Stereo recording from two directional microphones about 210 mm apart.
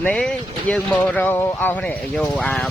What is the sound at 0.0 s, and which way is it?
Speech, 5° left (ahead or behind).